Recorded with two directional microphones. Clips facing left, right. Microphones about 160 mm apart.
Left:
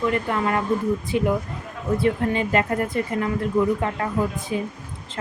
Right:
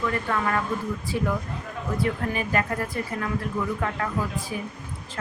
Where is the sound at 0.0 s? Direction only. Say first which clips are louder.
Left 4 dB; 20° left (ahead or behind).